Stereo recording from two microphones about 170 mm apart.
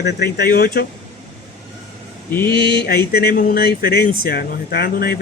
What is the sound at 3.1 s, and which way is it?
Speech, 65° left (ahead or behind).